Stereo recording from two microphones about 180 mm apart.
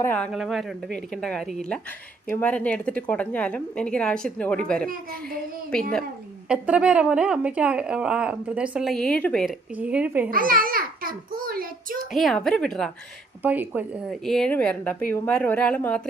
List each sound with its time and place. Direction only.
0.0 s a woman's voice: 10° left (ahead or behind)
0.3 s a woman's voice: centre (ahead or behind)
6.5 s speech: 5° right (ahead or behind)
9.7 s speech: 5° right (ahead or behind)
10.2 s a child's voice: 50° right (ahead or behind)
12.1 s speech: centre (ahead or behind)
13.4 s speech: 10° right (ahead or behind)
14.1 s a woman's voice: centre (ahead or behind)